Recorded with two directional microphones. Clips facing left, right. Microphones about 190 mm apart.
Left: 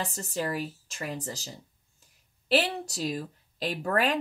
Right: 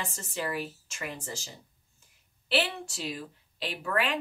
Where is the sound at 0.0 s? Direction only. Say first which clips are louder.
Left 3 dB; 35° left (ahead or behind).